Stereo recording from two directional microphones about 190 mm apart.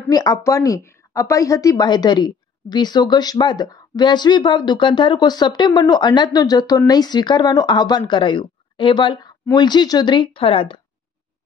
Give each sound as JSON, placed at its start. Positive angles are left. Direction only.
{"t": 0.1, "sound": "a woman's voice", "side_deg": 20}